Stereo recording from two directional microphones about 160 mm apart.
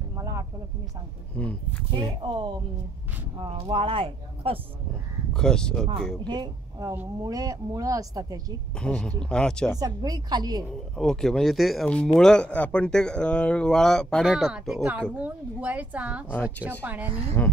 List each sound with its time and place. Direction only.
0.1 s a sound: 20° right (ahead or behind)
1.4 s speech: 10° left (ahead or behind)
2.2 s a woman's voice: 30° right (ahead or behind)
3.5 s speech: 35° right (ahead or behind)
5.3 s speech: 5° left (ahead or behind)
6.2 s a woman's voice: 25° right (ahead or behind)
8.7 s speech: 5° left (ahead or behind)
9.8 s a woman's voice: 25° right (ahead or behind)
11.0 s a woman's voice: 5° left (ahead or behind)
17.4 s speech: 15° left (ahead or behind)